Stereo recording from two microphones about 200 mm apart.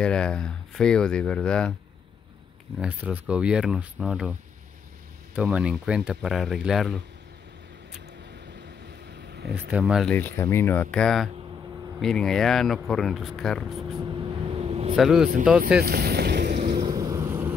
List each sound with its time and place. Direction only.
0.0 s speech: 5° left (ahead or behind)
2.8 s speech: 5° right (ahead or behind)
9.3 s a sound: 55° right (ahead or behind)
9.7 s speech: 5° right (ahead or behind)
10.1 s speech: 10° left (ahead or behind)
13.9 s vehicle: 25° right (ahead or behind)
15.0 s speech: centre (ahead or behind)
15.8 s speech: 50° right (ahead or behind)
16.7 s boat: 25° right (ahead or behind)